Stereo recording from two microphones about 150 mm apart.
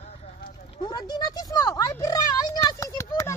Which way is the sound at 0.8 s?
30° left (ahead or behind).